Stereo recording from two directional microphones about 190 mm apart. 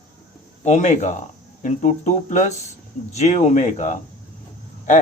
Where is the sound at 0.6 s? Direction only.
40° left (ahead or behind).